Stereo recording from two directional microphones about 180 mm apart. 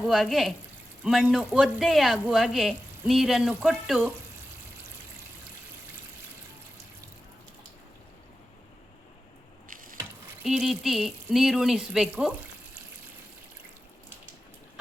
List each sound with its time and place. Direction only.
0.1 s speech: centre (ahead or behind)
9.6 s a sound: 50° right (ahead or behind)
10.4 s speech: centre (ahead or behind)